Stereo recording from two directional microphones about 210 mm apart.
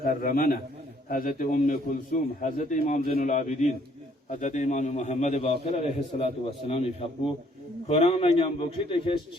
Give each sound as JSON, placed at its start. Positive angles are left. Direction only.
{"t": 0.0, "sound": "a man's voice", "side_deg": 40}